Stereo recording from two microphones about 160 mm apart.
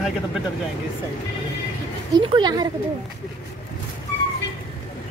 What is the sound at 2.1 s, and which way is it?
Speech, 30° right (ahead or behind).